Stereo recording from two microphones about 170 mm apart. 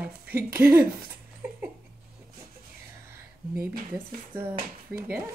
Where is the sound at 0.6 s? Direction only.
10° right (ahead or behind).